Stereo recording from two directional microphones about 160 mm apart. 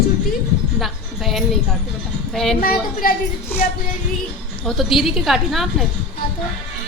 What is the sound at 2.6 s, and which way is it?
Speech, 65° left (ahead or behind).